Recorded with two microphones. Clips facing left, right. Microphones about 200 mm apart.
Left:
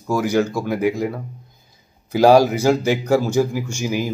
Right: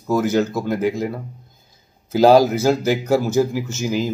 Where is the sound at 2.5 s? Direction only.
15° left (ahead or behind).